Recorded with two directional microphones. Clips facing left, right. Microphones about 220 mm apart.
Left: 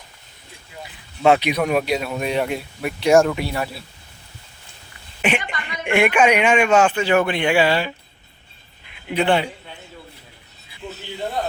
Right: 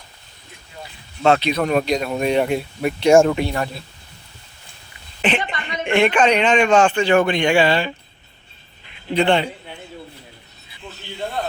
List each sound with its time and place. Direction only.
1.2 s a man's voice: 15° left (ahead or behind)
5.4 s a sound: 25° right (ahead or behind)
5.8 s a man's voice: 10° left (ahead or behind)
9.0 s a man's voice: 5° left (ahead or behind)